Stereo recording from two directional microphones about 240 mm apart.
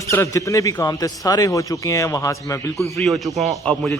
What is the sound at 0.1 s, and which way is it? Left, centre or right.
Speech, centre.